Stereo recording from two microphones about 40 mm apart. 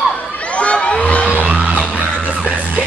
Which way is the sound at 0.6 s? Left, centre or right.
Left.